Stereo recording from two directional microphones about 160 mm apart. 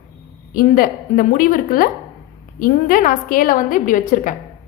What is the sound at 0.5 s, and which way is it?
A woman's voice, 60° left (ahead or behind).